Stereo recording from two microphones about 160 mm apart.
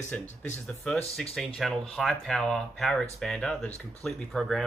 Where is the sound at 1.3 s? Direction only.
Centre (ahead or behind).